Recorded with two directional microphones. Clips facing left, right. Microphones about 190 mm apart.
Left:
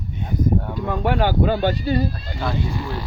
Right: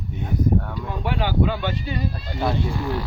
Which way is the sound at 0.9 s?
50° left (ahead or behind).